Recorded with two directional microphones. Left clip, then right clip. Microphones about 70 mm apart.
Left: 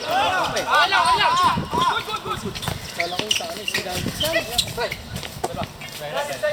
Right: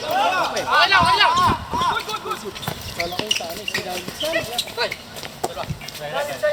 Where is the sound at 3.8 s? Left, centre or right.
Left.